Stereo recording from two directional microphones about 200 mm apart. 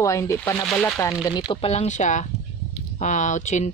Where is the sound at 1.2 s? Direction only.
20° left (ahead or behind).